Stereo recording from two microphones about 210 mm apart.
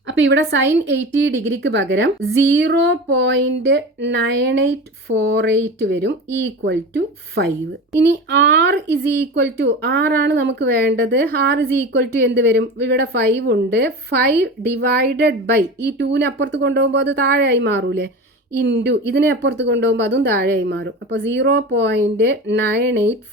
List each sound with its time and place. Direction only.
0.1 s a woman's voice: 60° right (ahead or behind)